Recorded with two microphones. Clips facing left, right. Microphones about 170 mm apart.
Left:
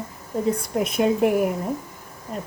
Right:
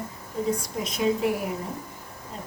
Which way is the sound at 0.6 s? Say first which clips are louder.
Left 5 dB; 55° left (ahead or behind).